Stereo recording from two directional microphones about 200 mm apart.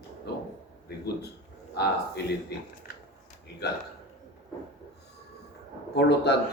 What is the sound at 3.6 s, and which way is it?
Speech, 55° left (ahead or behind).